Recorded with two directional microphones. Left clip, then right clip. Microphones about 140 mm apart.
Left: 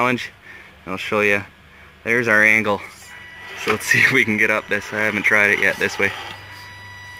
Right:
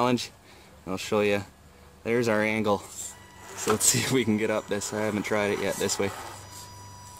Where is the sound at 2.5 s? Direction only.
30° right (ahead or behind).